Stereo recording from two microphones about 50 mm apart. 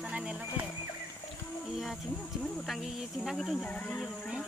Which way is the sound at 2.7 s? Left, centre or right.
Centre.